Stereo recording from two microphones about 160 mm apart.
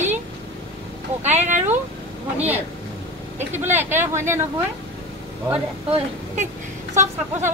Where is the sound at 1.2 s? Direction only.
45° right (ahead or behind).